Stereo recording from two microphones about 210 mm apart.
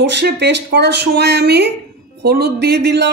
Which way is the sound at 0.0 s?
55° right (ahead or behind).